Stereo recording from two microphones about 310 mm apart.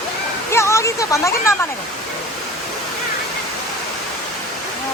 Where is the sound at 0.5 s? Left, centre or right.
Centre.